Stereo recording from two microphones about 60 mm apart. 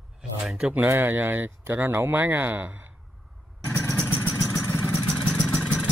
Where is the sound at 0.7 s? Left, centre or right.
Right.